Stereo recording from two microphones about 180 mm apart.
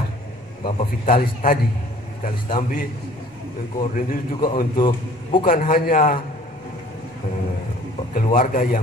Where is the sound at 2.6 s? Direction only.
50° left (ahead or behind).